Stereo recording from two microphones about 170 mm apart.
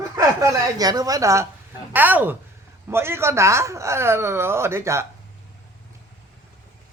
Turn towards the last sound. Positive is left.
turn(degrees=-15)  # may be behind; listen again after turning